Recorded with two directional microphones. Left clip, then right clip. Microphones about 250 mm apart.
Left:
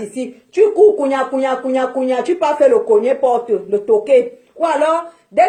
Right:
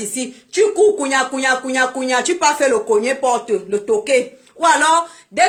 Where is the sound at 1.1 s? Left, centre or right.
Centre.